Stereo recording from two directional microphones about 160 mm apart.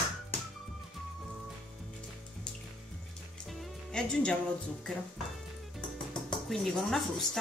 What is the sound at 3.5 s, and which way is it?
Music, centre (ahead or behind).